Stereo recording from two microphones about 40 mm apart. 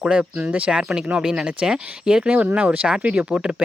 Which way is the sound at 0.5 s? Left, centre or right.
Right.